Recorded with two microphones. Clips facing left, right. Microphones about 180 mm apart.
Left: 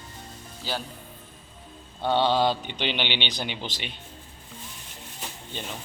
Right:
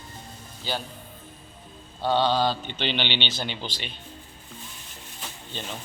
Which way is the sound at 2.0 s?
20° left (ahead or behind).